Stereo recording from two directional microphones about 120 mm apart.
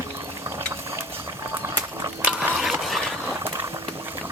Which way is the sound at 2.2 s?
10° right (ahead or behind).